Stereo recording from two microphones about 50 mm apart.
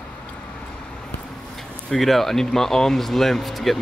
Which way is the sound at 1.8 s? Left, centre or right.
Centre.